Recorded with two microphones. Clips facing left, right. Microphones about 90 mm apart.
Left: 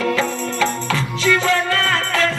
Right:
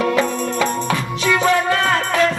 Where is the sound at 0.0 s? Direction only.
20° right (ahead or behind).